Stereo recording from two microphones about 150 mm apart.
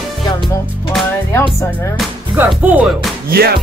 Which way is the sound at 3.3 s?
90° right.